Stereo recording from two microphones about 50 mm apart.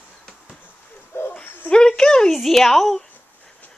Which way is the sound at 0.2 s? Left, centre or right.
Centre.